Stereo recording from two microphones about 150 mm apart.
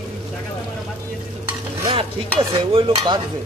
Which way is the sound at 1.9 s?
35° right (ahead or behind).